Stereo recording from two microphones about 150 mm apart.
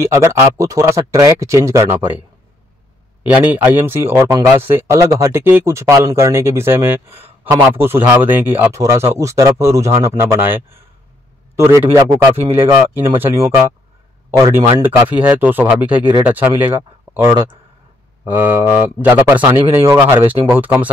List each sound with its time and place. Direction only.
0.0 s speech: 15° right (ahead or behind)
3.3 s speech: 10° right (ahead or behind)